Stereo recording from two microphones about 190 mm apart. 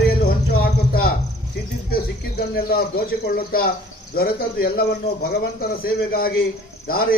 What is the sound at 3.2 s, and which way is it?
Speech, 50° left (ahead or behind).